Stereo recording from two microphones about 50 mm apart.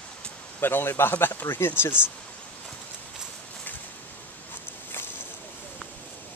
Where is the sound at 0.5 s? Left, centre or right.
Left.